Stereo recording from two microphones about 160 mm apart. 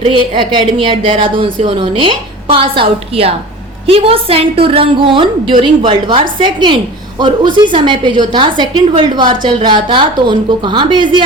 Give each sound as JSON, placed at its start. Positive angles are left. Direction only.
{"t": 0.1, "sound": "a woman's voice", "side_deg": -30}